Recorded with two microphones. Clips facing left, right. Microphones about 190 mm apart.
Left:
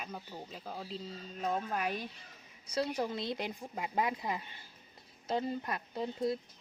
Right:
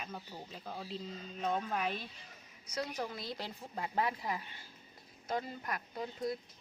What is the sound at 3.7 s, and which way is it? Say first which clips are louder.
Speech: even; 10° left (ahead or behind).